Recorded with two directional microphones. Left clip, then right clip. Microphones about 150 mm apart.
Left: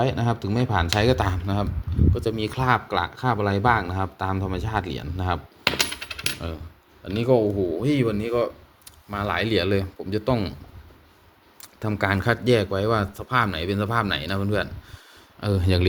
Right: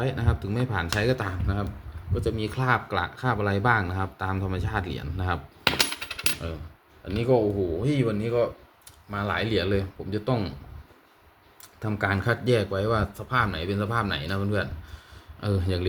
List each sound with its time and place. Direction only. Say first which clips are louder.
0.0 s speech: left 6 dB; 35° left (ahead or behind)
7.0 s speech: left 3 dB; 60° left (ahead or behind)
11.6 s speech: left 3 dB; 55° left (ahead or behind)